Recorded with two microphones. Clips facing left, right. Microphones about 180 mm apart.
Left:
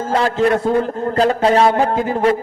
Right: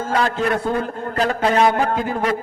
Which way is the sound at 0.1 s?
30° left (ahead or behind).